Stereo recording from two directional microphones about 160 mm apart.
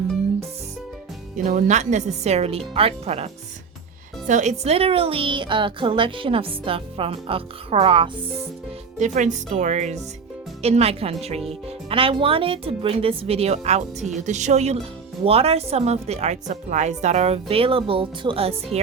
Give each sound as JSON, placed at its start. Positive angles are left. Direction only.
{"t": 1.5, "sound": "a woman's voice", "side_deg": -50}
{"t": 4.3, "sound": "a woman's voice", "side_deg": -50}
{"t": 9.0, "sound": "a woman's voice", "side_deg": -50}